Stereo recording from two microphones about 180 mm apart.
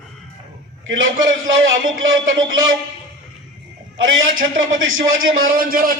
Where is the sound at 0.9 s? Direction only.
90° right.